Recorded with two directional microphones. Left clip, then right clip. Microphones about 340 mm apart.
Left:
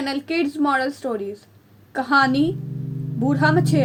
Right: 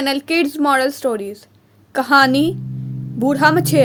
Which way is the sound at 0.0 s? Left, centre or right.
Right.